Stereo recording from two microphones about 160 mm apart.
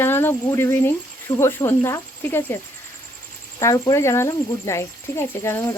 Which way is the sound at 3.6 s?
20° left (ahead or behind).